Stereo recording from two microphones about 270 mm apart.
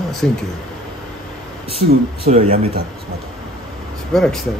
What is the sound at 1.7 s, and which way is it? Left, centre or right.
Speech, right.